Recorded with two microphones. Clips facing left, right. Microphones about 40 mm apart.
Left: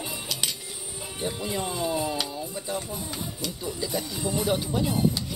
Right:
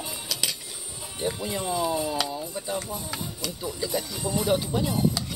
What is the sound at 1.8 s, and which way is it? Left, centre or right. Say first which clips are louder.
Speech: left 1 dB; left.